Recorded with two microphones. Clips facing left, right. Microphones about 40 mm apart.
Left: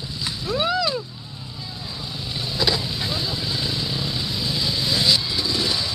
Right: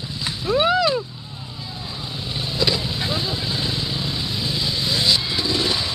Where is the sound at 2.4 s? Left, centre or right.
Centre.